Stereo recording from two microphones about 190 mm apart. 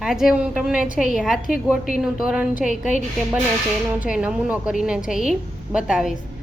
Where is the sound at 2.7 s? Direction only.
40° left (ahead or behind).